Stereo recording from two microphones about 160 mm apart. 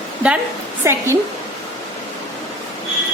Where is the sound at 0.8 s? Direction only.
15° right (ahead or behind).